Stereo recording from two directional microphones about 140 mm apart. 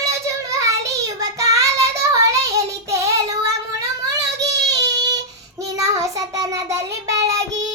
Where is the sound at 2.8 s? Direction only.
20° right (ahead or behind).